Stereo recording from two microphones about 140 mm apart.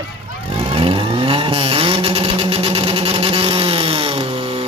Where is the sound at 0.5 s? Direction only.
40° right (ahead or behind).